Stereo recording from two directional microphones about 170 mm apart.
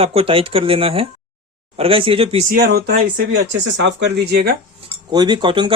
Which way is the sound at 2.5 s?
65° right (ahead or behind).